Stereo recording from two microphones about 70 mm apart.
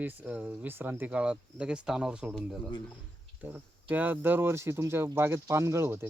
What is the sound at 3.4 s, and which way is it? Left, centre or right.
Speech, right.